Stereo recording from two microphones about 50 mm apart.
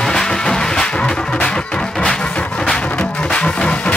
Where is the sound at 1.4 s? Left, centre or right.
Centre.